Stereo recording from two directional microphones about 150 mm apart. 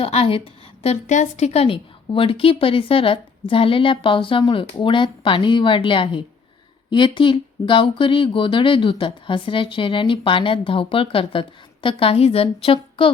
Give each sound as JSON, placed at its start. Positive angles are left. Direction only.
{"t": 0.0, "sound": "speech", "side_deg": 40}